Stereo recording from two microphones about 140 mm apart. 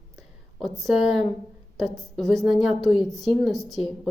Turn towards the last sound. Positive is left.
turn(degrees=0)  # may be behind; listen again after turning